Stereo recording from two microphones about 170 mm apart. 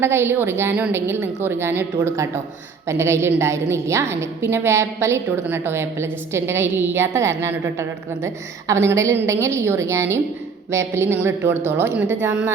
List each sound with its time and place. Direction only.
0.0 s a woman's voice: 15° right (ahead or behind)